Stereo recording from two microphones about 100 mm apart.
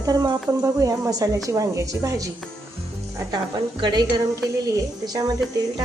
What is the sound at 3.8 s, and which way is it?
Speech, 45° right (ahead or behind).